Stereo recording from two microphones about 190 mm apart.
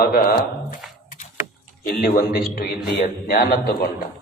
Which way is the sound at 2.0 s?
50° left (ahead or behind).